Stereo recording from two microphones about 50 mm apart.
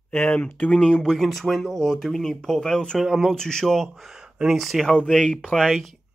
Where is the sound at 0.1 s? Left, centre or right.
Left.